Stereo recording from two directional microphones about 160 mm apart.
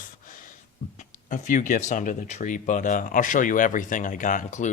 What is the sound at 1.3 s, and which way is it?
Speech, 55° left (ahead or behind).